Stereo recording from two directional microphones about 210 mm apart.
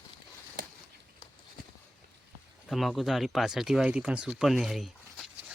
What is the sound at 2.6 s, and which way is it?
Speech, centre (ahead or behind).